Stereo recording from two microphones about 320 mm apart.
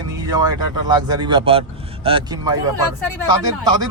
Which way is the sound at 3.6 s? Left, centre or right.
Centre.